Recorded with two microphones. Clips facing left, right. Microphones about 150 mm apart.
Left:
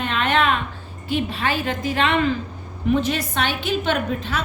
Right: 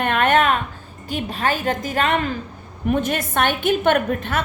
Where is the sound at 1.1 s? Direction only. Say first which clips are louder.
Even; 40° right (ahead or behind).